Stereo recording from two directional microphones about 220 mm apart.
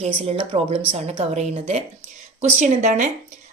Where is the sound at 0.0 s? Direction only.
25° right (ahead or behind).